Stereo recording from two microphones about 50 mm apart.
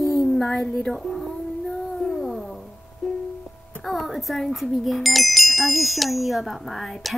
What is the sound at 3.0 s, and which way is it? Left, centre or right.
Music, centre.